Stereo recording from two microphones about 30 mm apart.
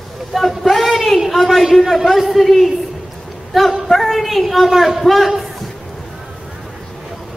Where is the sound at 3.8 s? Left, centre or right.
Centre.